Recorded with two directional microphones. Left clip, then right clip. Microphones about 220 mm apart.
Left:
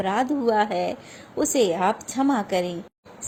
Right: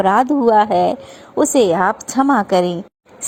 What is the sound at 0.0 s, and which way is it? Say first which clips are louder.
A woman's voice: right 10 dB; 30° right (ahead or behind).